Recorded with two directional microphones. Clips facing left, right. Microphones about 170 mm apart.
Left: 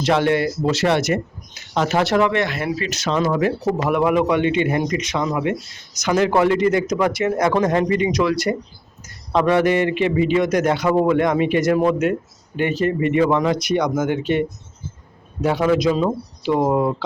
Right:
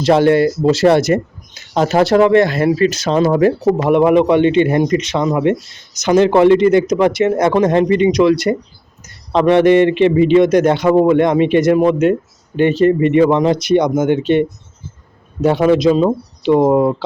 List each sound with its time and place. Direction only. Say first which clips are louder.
0.0 s a man's voice: right 7 dB; 35° right (ahead or behind)